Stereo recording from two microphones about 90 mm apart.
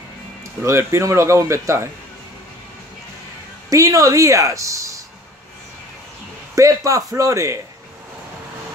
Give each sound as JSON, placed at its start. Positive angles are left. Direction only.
{"t": 0.7, "sound": "speech", "side_deg": -30}
{"t": 3.7, "sound": "speech", "side_deg": -40}
{"t": 6.5, "sound": "speech", "side_deg": -35}